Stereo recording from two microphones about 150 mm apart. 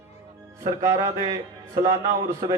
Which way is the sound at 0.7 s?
20° right (ahead or behind).